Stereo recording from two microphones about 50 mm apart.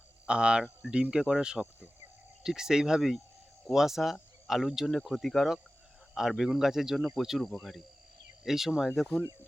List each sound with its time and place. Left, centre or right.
0.3 s speech: centre
8.4 s speech: centre